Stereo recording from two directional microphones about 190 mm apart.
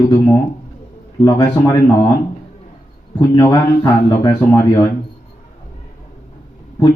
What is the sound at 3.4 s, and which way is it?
A man's voice, 20° left (ahead or behind).